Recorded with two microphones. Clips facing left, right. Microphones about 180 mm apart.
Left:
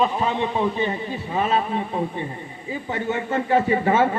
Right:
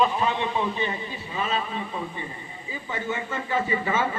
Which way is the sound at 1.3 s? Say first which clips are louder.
Left 6 dB; 55° left (ahead or behind).